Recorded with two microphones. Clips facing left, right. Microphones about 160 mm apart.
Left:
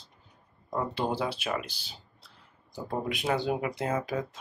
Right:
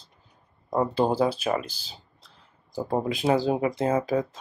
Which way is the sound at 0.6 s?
40° right (ahead or behind).